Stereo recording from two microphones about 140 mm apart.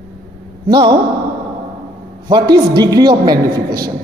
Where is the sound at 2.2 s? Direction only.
30° right (ahead or behind).